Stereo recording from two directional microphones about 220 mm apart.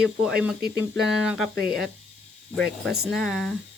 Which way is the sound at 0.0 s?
5° right (ahead or behind).